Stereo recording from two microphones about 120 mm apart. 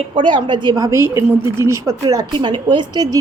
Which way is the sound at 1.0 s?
20° right (ahead or behind).